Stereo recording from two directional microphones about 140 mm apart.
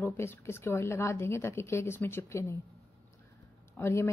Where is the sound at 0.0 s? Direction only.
15° left (ahead or behind).